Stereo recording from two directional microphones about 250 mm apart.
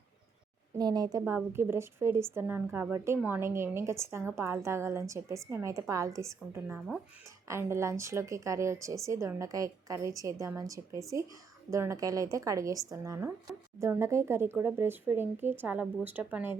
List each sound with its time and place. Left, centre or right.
0.8 s speech: centre